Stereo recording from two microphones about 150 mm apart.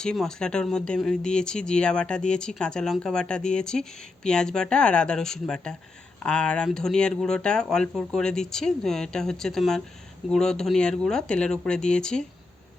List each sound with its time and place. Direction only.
0.0 s speech: 5° left (ahead or behind)